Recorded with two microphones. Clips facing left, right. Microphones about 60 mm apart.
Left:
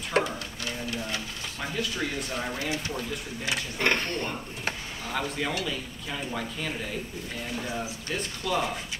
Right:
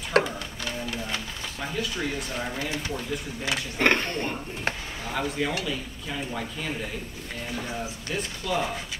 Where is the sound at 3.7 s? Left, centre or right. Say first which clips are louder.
Right 4 dB; right.